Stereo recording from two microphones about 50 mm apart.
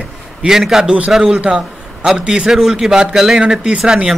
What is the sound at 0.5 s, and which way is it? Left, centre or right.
Speech, centre.